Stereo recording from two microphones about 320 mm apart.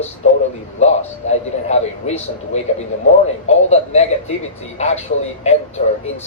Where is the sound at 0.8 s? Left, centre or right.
Left.